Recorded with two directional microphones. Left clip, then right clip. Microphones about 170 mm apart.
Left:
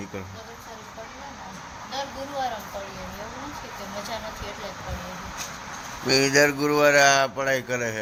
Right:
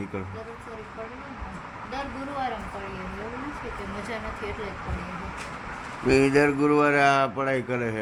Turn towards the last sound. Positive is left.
turn(degrees=0)  # may be behind; listen again after turning